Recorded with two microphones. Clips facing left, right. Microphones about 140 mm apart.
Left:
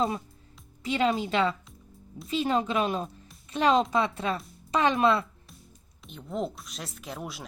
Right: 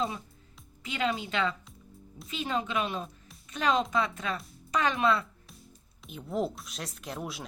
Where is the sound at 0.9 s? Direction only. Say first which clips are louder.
Left 5 dB; 30° left (ahead or behind).